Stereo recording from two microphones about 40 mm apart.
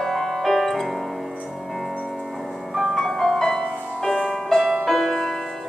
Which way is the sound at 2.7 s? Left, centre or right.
Centre.